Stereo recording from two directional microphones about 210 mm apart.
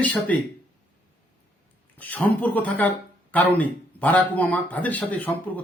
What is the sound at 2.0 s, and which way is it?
Speech, 5° left (ahead or behind).